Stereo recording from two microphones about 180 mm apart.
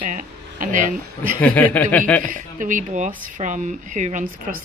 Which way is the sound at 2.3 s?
45° right (ahead or behind).